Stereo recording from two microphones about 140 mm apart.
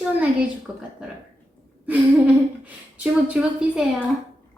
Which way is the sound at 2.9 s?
10° right (ahead or behind).